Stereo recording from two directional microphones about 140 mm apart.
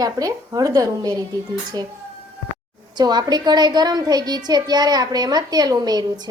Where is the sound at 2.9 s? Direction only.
30° right (ahead or behind).